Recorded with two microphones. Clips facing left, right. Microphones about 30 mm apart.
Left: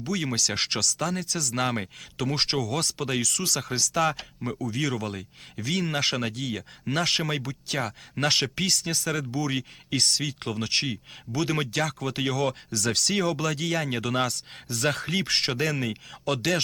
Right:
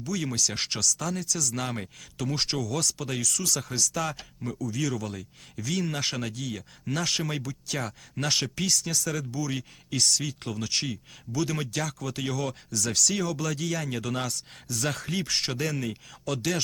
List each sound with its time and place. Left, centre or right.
0.0 s speech: left
6.0 s speech: centre
13.4 s speech: centre
13.7 s speech: left